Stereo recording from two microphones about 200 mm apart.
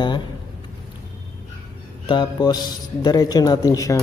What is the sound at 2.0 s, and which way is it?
Speech, 25° left (ahead or behind).